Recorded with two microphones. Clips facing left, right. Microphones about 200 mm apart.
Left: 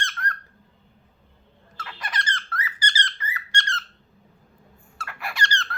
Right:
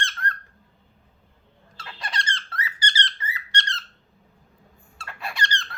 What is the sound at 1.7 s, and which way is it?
Squeak, 30° right (ahead or behind).